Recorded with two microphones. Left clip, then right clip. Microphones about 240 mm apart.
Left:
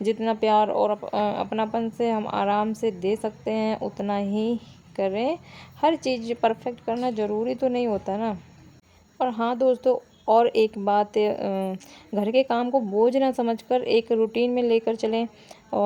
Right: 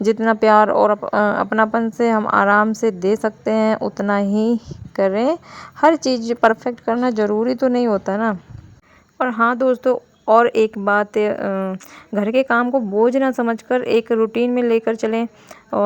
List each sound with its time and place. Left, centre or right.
0.0 s speech: right
9.1 s speech: centre